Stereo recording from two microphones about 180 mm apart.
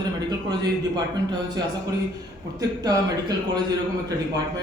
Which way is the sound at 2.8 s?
20° right (ahead or behind).